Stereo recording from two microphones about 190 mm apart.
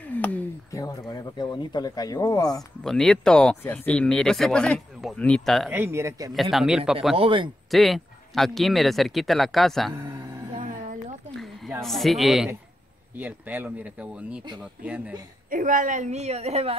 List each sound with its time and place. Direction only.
0.0 s speech: 10° left (ahead or behind)
2.8 s speech: centre (ahead or behind)
5.7 s speech: 10° right (ahead or behind)
6.3 s speech: centre (ahead or behind)
7.2 s speech: 25° right (ahead or behind)
7.7 s speech: centre (ahead or behind)
9.9 s music: 15° right (ahead or behind)
10.6 s a sound: 40° right (ahead or behind)
11.3 s a sound: centre (ahead or behind)
11.8 s speech: centre (ahead or behind)
15.5 s a woman's voice: 45° right (ahead or behind)